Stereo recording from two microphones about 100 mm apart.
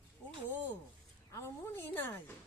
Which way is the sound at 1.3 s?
25° left (ahead or behind).